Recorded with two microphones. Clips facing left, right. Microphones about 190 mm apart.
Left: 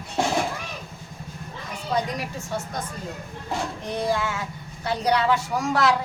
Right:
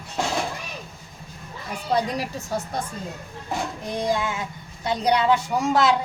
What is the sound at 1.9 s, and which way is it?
Speech, 35° right (ahead or behind).